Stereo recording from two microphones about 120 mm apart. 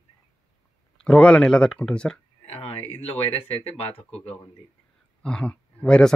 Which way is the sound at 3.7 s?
55° left (ahead or behind).